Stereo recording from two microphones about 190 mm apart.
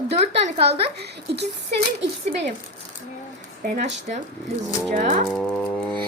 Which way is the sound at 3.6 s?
45° right (ahead or behind).